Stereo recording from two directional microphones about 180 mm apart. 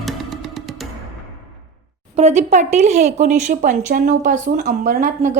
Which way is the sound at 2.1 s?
40° right (ahead or behind).